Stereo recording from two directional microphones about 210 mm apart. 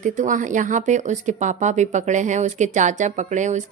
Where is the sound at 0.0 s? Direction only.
35° right (ahead or behind).